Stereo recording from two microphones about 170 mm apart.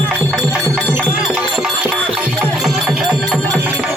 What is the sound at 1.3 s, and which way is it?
Music, 5° right (ahead or behind).